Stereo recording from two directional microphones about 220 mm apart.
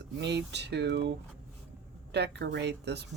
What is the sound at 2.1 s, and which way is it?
Speech, 50° right (ahead or behind).